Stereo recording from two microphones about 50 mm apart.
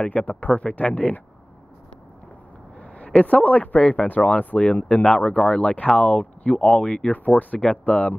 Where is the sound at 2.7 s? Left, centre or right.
Left.